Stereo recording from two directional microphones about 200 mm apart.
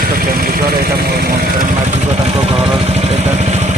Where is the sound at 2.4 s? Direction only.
30° right (ahead or behind).